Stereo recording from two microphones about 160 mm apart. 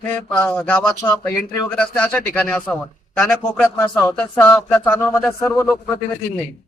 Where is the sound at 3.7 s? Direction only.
20° left (ahead or behind).